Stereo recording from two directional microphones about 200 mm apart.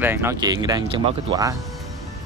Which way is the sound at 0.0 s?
10° right (ahead or behind).